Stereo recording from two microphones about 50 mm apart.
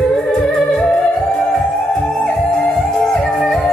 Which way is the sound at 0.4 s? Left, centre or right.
Centre.